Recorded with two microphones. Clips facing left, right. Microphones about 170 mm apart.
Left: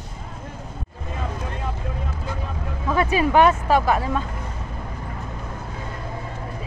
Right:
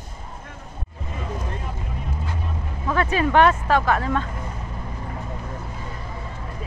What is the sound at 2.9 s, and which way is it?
Speech, 10° left (ahead or behind).